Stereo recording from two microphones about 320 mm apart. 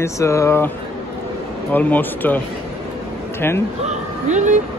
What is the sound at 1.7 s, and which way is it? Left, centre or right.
Speech, centre.